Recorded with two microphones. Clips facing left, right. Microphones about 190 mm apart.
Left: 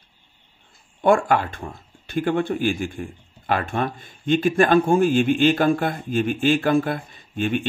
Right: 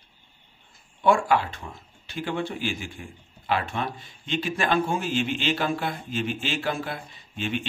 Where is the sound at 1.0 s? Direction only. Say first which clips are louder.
Left 3 dB; 50° left (ahead or behind).